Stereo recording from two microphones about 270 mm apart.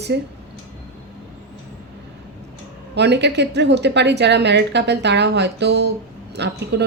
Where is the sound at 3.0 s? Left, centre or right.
Right.